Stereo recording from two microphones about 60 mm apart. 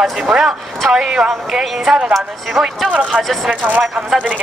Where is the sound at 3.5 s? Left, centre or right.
Right.